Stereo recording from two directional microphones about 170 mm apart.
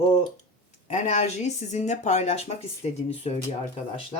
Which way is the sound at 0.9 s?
40° left (ahead or behind).